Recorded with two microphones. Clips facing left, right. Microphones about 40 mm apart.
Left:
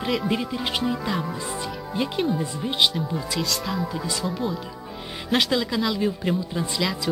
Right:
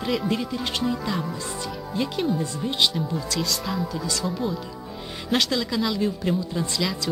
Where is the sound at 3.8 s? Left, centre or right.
Centre.